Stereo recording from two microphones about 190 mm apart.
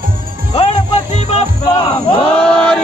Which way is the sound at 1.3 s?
30° left (ahead or behind).